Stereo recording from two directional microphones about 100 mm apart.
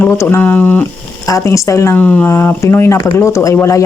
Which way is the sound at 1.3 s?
30° left (ahead or behind).